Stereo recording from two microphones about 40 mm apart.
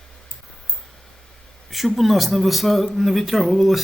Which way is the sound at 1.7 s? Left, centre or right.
Centre.